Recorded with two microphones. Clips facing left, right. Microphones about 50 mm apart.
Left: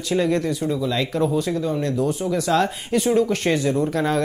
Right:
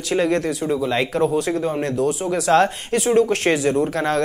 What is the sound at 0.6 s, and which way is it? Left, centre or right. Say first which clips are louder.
Speech: right 2 dB; right.